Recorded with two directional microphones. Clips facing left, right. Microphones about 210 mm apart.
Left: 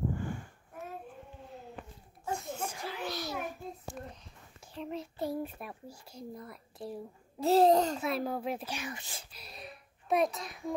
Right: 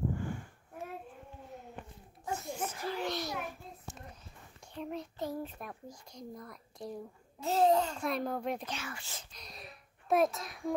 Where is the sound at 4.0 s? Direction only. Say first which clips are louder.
Left 7 dB; 55° left (ahead or behind).